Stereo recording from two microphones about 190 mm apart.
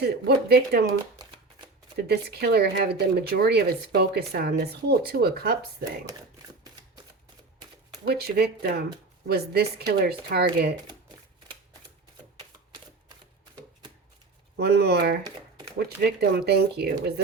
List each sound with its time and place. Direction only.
0.0 s speech: 55° right (ahead or behind)
2.0 s speech: 55° right (ahead or behind)
8.1 s speech: 55° right (ahead or behind)
14.5 s speech: 60° right (ahead or behind)